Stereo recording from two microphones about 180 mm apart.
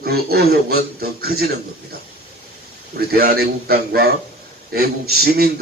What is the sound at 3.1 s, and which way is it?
Speech, 60° right (ahead or behind).